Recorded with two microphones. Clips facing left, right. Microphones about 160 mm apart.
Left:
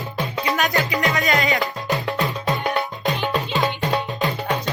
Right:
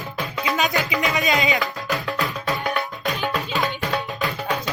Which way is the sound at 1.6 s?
20° left (ahead or behind).